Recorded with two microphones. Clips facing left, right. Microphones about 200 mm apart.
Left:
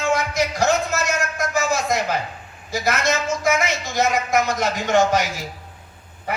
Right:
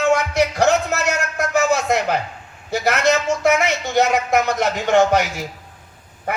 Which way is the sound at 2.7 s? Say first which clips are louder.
Right 4 dB; 65° right (ahead or behind).